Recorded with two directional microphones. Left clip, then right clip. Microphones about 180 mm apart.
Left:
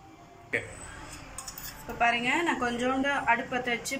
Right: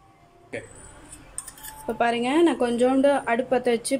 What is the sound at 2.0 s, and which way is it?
A woman's voice, 60° right (ahead or behind).